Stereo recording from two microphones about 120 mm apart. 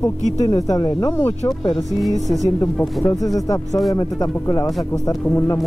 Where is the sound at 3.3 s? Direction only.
30° left (ahead or behind).